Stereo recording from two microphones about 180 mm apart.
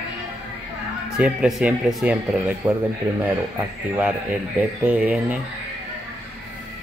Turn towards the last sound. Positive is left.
turn(degrees=-5)  # may be behind; listen again after turning